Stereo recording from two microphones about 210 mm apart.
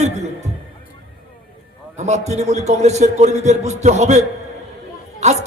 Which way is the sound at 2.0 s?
35° right (ahead or behind).